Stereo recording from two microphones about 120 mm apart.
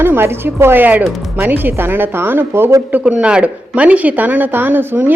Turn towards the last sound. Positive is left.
turn(degrees=-15)  # may be behind; listen again after turning